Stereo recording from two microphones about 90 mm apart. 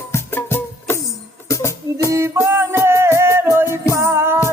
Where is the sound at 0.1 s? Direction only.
25° left (ahead or behind).